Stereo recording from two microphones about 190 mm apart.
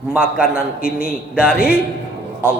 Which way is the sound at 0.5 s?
50° left (ahead or behind).